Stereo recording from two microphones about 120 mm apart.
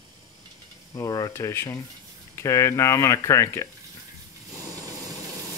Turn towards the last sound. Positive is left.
turn(degrees=-30)  # may be behind; listen again after turning